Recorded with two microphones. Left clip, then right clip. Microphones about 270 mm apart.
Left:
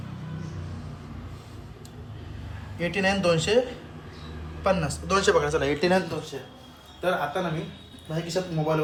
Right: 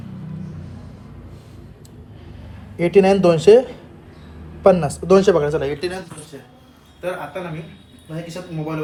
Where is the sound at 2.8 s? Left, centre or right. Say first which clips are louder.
Right 11 dB; centre.